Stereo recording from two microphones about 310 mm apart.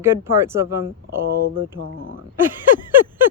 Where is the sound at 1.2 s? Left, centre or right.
Right.